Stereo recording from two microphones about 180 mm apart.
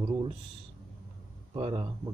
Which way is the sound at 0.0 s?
25° right (ahead or behind).